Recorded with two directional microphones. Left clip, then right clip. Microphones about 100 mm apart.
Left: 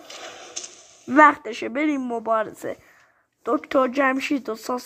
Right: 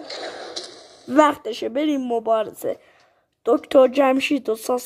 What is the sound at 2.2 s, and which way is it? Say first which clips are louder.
Speech: right 2 dB; 10° right (ahead or behind).